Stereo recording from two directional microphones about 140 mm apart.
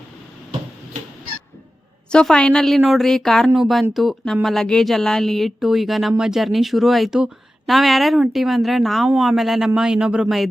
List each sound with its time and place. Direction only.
2.1 s a woman's voice: 5° left (ahead or behind)